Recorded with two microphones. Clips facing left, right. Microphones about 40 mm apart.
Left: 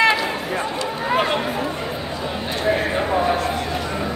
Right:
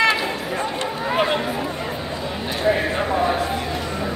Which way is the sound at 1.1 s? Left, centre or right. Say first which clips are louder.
Left 1 dB; centre.